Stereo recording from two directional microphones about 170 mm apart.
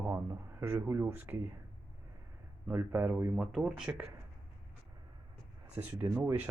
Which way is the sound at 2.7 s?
10° right (ahead or behind).